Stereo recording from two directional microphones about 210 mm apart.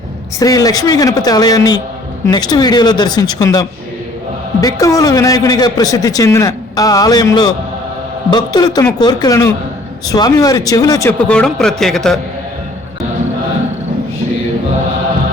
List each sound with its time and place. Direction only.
0.3 s a man's voice: 15° left (ahead or behind)
11.3 s speech: 5° left (ahead or behind)